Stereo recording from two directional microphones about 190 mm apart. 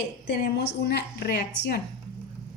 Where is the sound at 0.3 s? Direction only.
55° left (ahead or behind).